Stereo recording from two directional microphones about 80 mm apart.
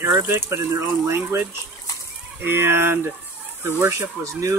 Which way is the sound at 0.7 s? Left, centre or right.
Right.